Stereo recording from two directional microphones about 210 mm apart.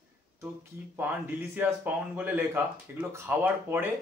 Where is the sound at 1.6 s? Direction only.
10° right (ahead or behind).